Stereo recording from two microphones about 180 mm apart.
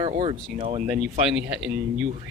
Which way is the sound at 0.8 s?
5° right (ahead or behind).